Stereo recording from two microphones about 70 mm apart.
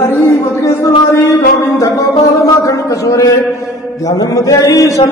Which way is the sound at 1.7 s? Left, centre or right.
Left.